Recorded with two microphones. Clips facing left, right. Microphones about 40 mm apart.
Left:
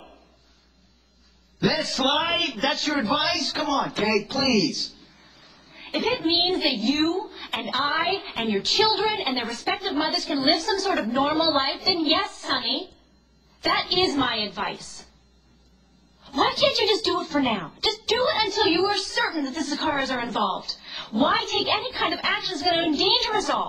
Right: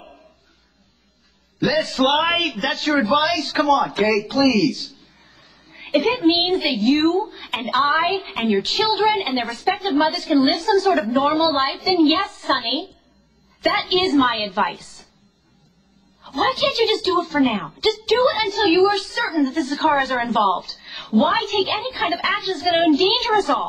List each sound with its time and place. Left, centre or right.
1.6 s a woman's voice: centre
5.1 s a sound: right
5.5 s a woman's voice: centre
13.8 s a woman's voice: centre
16.3 s a woman's voice: centre